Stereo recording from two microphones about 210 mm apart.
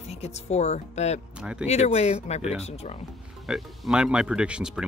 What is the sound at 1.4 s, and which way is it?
Speech, 5° right (ahead or behind).